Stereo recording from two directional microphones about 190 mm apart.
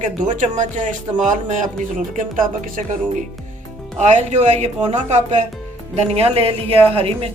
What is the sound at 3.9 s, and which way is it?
Speech, 40° right (ahead or behind).